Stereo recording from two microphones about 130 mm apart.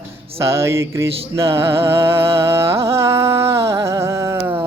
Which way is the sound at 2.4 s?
20° right (ahead or behind).